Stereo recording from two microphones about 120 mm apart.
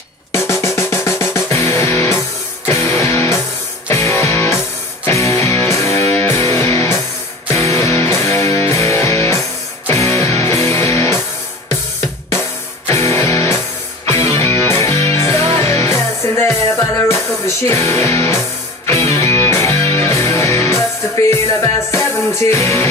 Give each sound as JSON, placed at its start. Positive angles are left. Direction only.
{"t": 0.3, "sound": "music", "side_deg": 25}
{"t": 12.4, "sound": "music", "side_deg": 25}